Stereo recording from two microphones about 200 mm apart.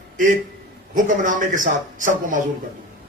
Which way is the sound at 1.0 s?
40° right (ahead or behind).